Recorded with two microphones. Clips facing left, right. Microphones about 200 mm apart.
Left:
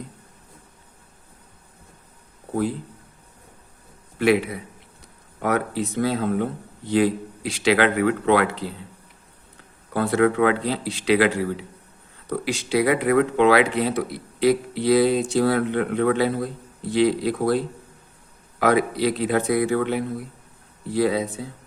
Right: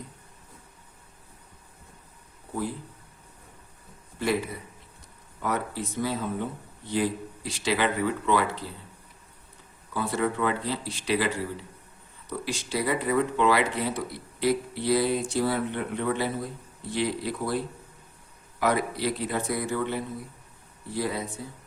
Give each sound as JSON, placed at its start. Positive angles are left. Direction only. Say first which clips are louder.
{"t": 4.2, "sound": "a man's voice", "louder": "left 8 dB", "side_deg": 75}
{"t": 9.9, "sound": "speech", "louder": "left 8 dB", "side_deg": 75}
{"t": 10.7, "sound": "speech", "louder": "left 7 dB", "side_deg": 80}
{"t": 12.3, "sound": "speech", "louder": "left 8 dB", "side_deg": 75}
{"t": 18.6, "sound": "speech", "louder": "left 6 dB", "side_deg": 90}